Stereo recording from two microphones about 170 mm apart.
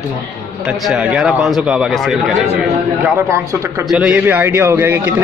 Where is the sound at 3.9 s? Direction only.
5° right (ahead or behind).